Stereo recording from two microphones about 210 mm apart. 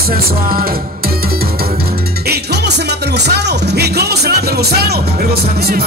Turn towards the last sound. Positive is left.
turn(degrees=-50)  # may be behind; listen again after turning